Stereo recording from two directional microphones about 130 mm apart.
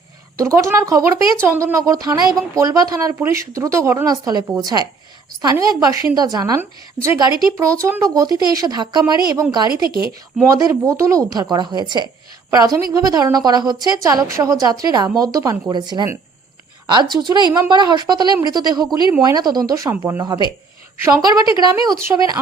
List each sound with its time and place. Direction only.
0.3 s a woman's voice: 25° right (ahead or behind)
10.4 s a woman's voice: 20° right (ahead or behind)
20.2 s speech: 30° right (ahead or behind)